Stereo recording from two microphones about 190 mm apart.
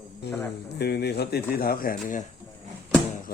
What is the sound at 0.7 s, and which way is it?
Speech, 60° left (ahead or behind).